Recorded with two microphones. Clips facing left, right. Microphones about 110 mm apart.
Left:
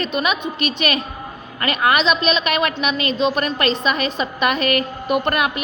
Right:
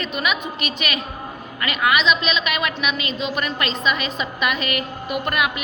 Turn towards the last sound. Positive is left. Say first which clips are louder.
# left 4 dB
turn(degrees=40)  # may be behind; listen again after turning